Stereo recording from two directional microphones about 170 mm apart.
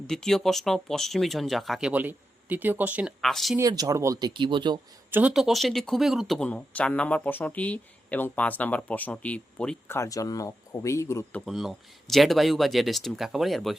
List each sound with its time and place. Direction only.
0.1 s speech: 5° left (ahead or behind)
3.6 s speech: 20° right (ahead or behind)
5.1 s speech: 5° right (ahead or behind)
10.0 s speech: 20° left (ahead or behind); by 13.7 s centre (ahead or behind)